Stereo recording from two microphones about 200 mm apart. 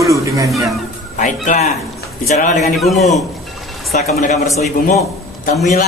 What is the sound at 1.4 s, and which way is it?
Speech, 35° left (ahead or behind).